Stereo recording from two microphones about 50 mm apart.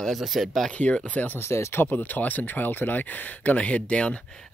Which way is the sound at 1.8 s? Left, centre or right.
Left.